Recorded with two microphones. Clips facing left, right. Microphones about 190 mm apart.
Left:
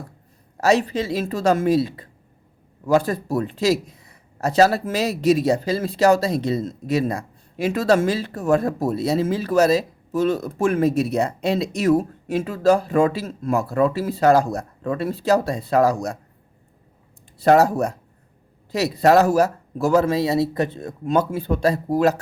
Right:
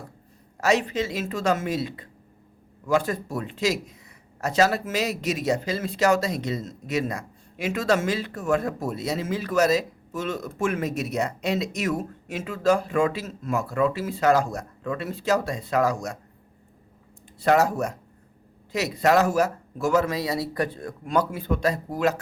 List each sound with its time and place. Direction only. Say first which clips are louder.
0.5 s speech: left 4 dB; 35° left (ahead or behind)
17.4 s speech: left 5 dB; 35° left (ahead or behind)